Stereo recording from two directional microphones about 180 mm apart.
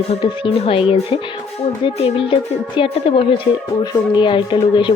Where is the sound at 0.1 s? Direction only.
30° left (ahead or behind).